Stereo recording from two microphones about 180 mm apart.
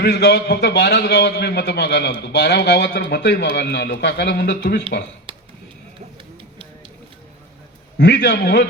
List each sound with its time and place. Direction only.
0.0 s speech: 70° left (ahead or behind)
5.3 s a sound: 30° right (ahead or behind)
7.9 s speech: 70° left (ahead or behind)